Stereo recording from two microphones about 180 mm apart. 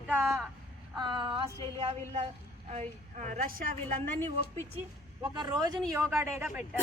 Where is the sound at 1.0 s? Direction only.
25° right (ahead or behind).